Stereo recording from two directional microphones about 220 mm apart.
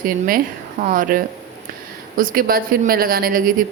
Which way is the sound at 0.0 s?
40° right (ahead or behind).